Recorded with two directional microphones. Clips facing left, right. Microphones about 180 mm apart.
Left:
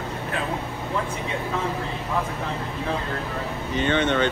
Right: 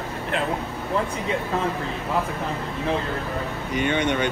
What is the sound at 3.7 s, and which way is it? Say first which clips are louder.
Speech: left 1 dB; 15° right (ahead or behind).